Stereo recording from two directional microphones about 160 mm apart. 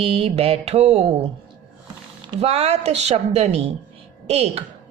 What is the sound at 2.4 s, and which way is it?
Speech, 40° right (ahead or behind).